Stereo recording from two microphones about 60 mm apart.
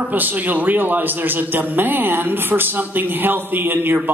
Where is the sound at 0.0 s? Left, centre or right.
Right.